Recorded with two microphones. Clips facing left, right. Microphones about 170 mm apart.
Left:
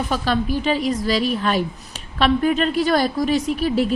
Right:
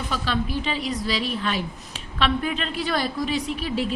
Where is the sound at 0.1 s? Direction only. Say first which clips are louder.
Left 3 dB; 45° left (ahead or behind).